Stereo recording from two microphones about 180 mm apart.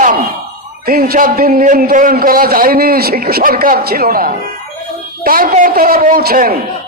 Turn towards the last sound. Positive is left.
turn(degrees=-55)  # may be behind; listen again after turning